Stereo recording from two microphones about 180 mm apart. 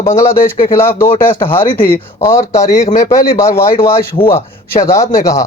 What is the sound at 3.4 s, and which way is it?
Speech, 15° left (ahead or behind).